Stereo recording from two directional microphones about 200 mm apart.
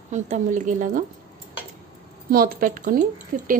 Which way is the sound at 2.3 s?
45° right (ahead or behind).